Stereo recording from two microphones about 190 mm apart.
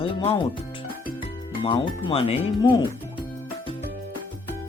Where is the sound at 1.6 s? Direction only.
25° left (ahead or behind).